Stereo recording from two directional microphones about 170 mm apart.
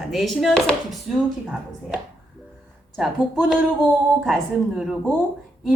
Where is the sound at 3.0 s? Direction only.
Centre (ahead or behind).